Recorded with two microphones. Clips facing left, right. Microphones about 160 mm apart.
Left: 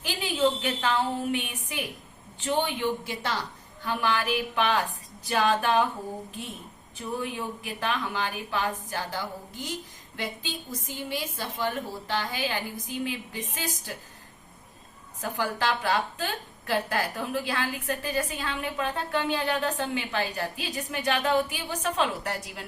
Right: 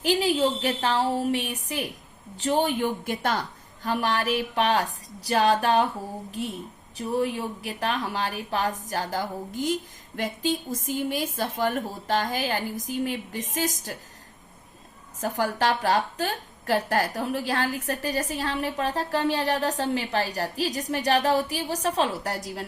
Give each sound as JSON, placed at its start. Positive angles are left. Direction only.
{"t": 0.0, "sound": "a woman's voice", "side_deg": -40}
{"t": 15.2, "sound": "a woman's voice", "side_deg": -40}